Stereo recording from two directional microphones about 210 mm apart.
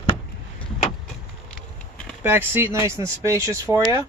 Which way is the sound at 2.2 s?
10° right (ahead or behind).